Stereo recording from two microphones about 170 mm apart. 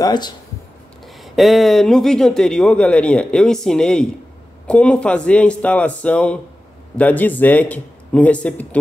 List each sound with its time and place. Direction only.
0.0 s speech: 25° left (ahead or behind)
1.0 s a man's voice: centre (ahead or behind)